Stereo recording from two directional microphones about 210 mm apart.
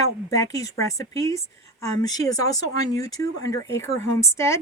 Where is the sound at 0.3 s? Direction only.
15° left (ahead or behind).